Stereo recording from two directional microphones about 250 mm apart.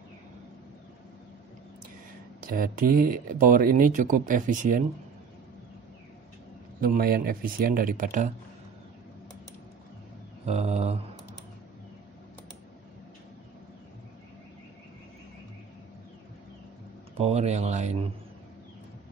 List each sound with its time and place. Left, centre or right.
2.5 s speech: right
6.8 s speech: right
10.4 s speech: right
17.2 s speech: right